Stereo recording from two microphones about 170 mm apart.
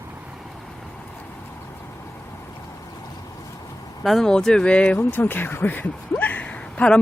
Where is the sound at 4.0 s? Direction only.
Centre (ahead or behind).